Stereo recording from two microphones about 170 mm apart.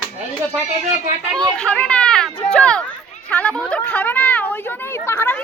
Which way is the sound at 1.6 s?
5° left (ahead or behind).